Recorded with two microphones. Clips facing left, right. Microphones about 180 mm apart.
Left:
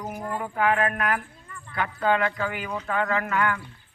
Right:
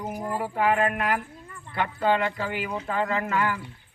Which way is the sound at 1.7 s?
30° right (ahead or behind).